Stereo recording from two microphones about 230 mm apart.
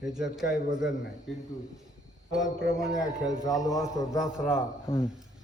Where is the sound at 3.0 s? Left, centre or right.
Centre.